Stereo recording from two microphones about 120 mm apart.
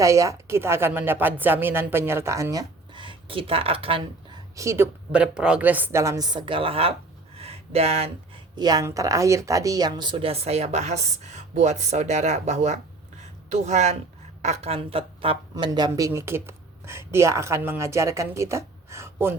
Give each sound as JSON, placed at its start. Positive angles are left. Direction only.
{"t": 0.0, "sound": "speech", "side_deg": -25}
{"t": 2.9, "sound": "speech", "side_deg": -45}
{"t": 4.5, "sound": "speech", "side_deg": -25}
{"t": 5.1, "sound": "speech", "side_deg": -10}
{"t": 7.3, "sound": "a sound", "side_deg": -55}
{"t": 8.5, "sound": "speech", "side_deg": -35}
{"t": 15.5, "sound": "speech", "side_deg": -35}
{"t": 15.9, "sound": "speech", "side_deg": -25}